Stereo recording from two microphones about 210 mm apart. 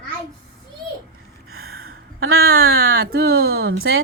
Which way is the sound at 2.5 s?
45° right (ahead or behind).